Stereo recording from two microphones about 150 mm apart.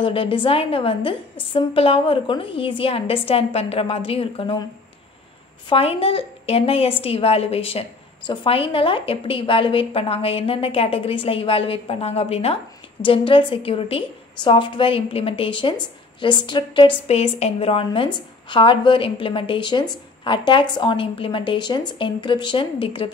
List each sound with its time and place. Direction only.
0.0 s a woman's voice: 35° left (ahead or behind)
5.7 s a woman's voice: 40° left (ahead or behind)
17.1 s a woman's voice: 45° left (ahead or behind)